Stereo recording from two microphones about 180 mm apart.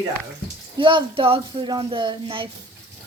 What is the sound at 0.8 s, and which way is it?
Speech, 25° right (ahead or behind).